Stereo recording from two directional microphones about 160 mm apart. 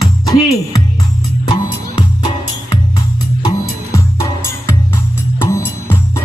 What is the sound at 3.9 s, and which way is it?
Music, 20° left (ahead or behind).